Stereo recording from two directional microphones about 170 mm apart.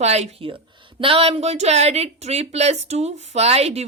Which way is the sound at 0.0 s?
40° right (ahead or behind).